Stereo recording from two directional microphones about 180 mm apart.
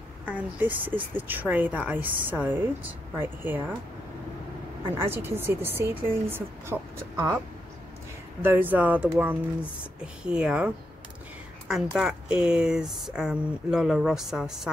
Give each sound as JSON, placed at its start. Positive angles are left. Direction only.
{"t": 0.2, "sound": "a woman's voice", "side_deg": -10}
{"t": 4.9, "sound": "a woman's voice", "side_deg": -15}
{"t": 8.4, "sound": "a woman's voice", "side_deg": -10}
{"t": 12.0, "sound": "speech", "side_deg": -5}